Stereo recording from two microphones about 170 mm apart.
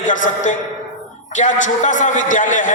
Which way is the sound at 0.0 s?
50° left (ahead or behind).